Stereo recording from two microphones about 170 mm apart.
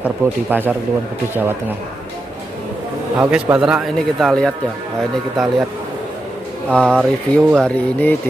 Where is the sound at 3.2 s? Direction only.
10° right (ahead or behind).